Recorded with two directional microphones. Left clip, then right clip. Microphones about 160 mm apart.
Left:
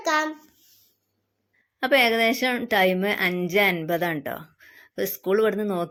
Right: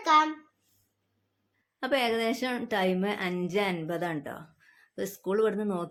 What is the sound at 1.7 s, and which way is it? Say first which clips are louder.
A woman's voice: left 8 dB; 30° left (ahead or behind).